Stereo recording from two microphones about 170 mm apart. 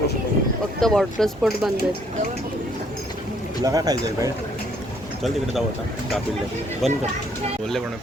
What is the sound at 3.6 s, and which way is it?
Speech, 20° right (ahead or behind).